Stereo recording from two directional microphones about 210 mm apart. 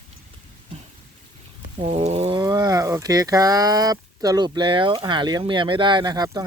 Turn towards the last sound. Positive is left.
turn(degrees=-20)  # may be behind; listen again after turning